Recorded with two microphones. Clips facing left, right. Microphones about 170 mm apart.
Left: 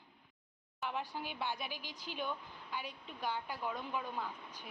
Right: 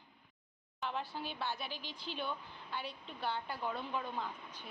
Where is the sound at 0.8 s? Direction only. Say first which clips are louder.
Even; 10° left (ahead or behind).